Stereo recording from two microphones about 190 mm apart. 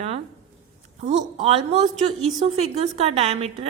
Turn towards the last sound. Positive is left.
turn(degrees=-30)  # may be behind; listen again after turning